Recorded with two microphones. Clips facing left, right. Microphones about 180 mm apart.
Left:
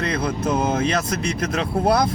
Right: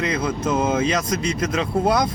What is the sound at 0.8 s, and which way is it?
Speech, 60° left (ahead or behind).